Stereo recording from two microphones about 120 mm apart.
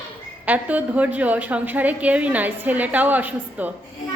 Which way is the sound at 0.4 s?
15° right (ahead or behind).